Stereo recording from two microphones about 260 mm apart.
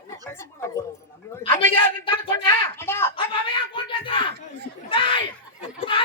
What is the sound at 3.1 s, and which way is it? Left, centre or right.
Speech, centre.